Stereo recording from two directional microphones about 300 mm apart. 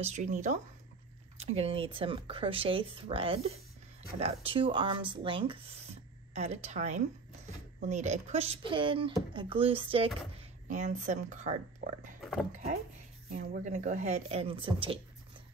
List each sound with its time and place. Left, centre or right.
0.0 s speech: right
12.2 s pig: centre
13.3 s speech: right